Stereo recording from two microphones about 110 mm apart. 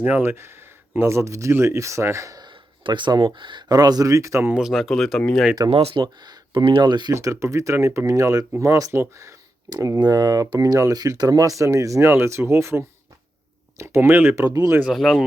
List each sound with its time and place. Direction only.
0.0 s speech: 20° right (ahead or behind)
2.8 s speech: 45° right (ahead or behind); by 4.5 s 25° right (ahead or behind)
4.5 s speech: 5° right (ahead or behind)
5.7 s speech: 60° right (ahead or behind)
6.0 s speech: 40° right (ahead or behind)
7.1 s speech: 30° right (ahead or behind)
14.5 s speech: 30° right (ahead or behind)
14.9 s speech: centre (ahead or behind)